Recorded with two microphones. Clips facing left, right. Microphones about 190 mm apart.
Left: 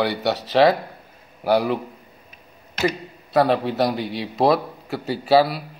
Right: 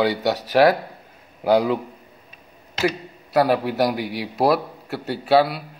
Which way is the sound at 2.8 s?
10° right (ahead or behind).